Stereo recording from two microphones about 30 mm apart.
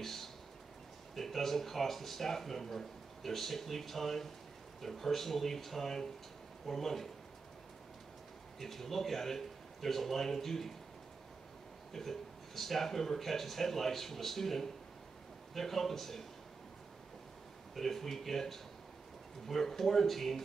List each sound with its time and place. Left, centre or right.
0.0 s a sound: centre
1.1 s speech: centre
8.5 s speech: centre
11.9 s speech: centre
17.7 s speech: centre